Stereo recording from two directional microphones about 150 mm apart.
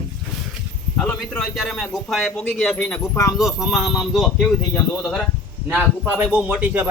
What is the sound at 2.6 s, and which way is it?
Speech, 15° left (ahead or behind).